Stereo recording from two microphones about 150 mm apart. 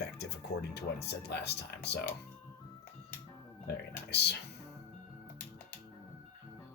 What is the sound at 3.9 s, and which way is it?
Speech, 90° left.